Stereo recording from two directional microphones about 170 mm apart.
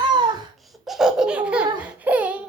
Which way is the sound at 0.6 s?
Centre (ahead or behind).